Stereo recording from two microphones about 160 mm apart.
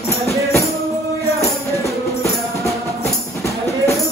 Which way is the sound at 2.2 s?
20° left (ahead or behind).